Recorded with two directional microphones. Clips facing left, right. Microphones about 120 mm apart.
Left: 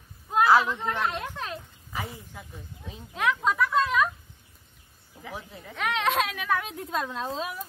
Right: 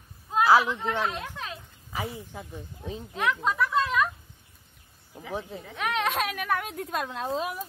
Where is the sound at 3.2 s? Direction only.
Centre (ahead or behind).